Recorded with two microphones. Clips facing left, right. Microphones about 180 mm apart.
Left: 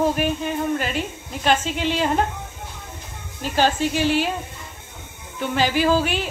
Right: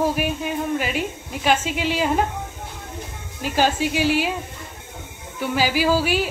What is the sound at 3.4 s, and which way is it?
Speech, 10° right (ahead or behind).